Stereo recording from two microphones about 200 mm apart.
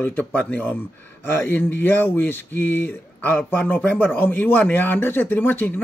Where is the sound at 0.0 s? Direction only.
10° left (ahead or behind).